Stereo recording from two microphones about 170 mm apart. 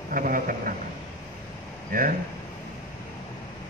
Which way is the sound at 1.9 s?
55° right (ahead or behind).